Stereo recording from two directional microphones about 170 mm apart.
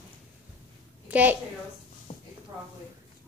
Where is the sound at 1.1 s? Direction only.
10° right (ahead or behind).